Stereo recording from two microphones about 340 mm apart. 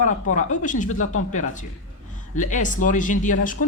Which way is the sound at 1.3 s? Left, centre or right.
Left.